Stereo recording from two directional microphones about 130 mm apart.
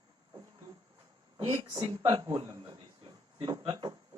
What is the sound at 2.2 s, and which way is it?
A man's voice, 40° right (ahead or behind).